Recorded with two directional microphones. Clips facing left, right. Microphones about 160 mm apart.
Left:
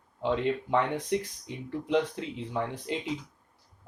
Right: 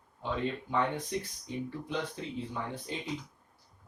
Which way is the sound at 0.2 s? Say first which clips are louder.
Left 6 dB; 80° left.